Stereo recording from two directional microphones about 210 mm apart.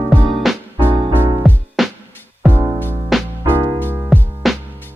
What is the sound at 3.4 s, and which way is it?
Music, 15° right (ahead or behind).